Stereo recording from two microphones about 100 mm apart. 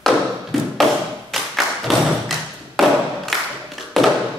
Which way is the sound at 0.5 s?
Centre (ahead or behind).